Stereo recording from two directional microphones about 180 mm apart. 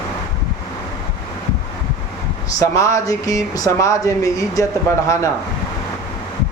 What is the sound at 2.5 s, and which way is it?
Speech, 20° left (ahead or behind).